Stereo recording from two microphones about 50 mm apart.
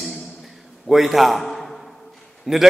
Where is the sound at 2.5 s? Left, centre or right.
Centre.